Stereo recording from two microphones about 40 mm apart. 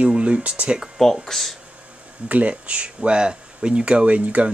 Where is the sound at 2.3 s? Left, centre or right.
Right.